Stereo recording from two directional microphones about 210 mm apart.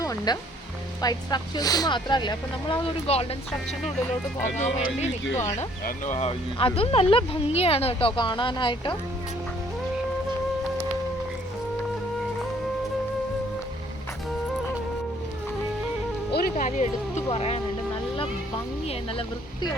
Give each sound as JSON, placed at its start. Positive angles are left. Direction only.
{"t": 0.0, "sound": "music", "side_deg": 15}
{"t": 1.0, "sound": "speech", "side_deg": 20}
{"t": 5.3, "sound": "speech", "side_deg": 15}
{"t": 5.5, "sound": "speech", "side_deg": 35}
{"t": 16.3, "sound": "music", "side_deg": 40}